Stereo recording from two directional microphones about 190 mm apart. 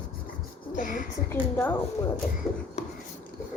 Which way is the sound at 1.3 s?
10° left (ahead or behind).